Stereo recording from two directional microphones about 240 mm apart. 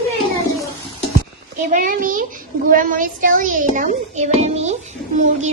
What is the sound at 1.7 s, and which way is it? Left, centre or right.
A child's voice, right.